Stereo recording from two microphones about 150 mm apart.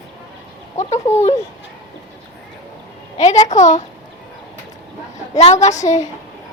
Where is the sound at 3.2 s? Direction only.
50° left (ahead or behind).